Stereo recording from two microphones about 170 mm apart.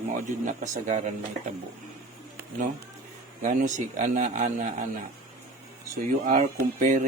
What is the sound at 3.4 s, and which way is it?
A man's voice, 45° right (ahead or behind).